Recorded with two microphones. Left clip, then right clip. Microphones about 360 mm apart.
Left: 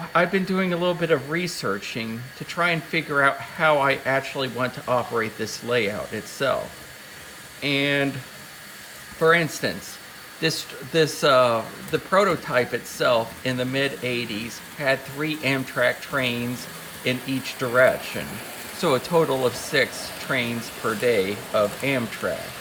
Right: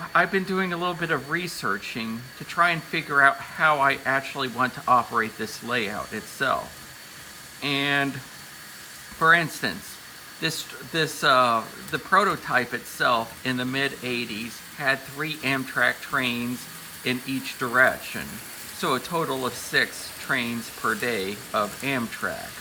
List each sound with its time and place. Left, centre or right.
0.1 s speech: centre
7.6 s speech: centre
9.1 s speech: centre